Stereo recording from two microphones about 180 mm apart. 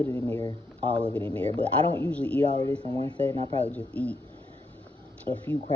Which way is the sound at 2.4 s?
30° right (ahead or behind).